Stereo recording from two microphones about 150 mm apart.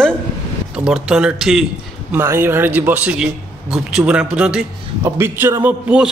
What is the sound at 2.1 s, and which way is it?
A man's voice, 15° right (ahead or behind).